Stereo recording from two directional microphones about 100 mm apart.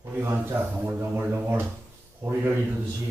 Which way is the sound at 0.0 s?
20° right (ahead or behind).